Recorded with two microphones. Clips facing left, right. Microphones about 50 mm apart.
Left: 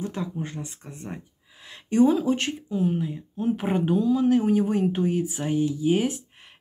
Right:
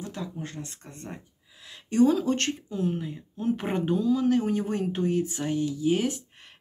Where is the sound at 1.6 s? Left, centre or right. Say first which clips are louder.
Left 2 dB; left.